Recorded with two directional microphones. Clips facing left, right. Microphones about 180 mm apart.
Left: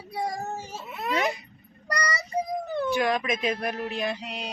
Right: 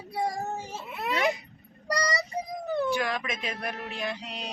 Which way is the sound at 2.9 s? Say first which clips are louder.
Left 5 dB; 20° left (ahead or behind).